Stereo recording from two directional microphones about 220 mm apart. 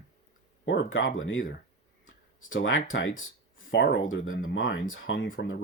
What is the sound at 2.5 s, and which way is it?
Speech, 60° left (ahead or behind).